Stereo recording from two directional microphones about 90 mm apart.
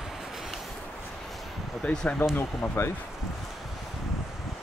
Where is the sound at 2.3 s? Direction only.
25° left (ahead or behind).